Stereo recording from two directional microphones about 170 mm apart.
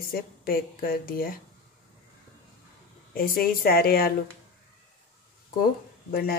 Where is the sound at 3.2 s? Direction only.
60° left (ahead or behind).